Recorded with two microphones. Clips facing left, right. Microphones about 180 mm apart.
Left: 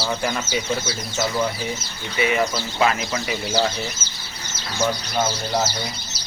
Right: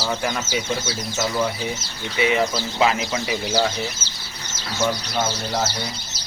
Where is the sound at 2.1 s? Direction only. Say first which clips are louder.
Right 1 dB; 20° right (ahead or behind).